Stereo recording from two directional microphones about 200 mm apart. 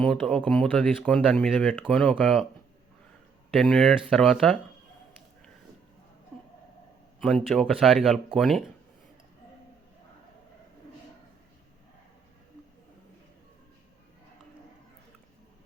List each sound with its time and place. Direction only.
0.0 s speech: 5° left (ahead or behind)
3.5 s speech: centre (ahead or behind)
7.2 s speech: 5° left (ahead or behind)